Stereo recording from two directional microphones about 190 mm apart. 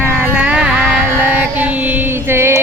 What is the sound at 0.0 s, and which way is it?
Carnatic music, 5° right (ahead or behind).